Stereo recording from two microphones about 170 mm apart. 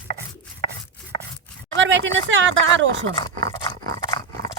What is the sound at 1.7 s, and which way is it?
A woman's voice, 90° right.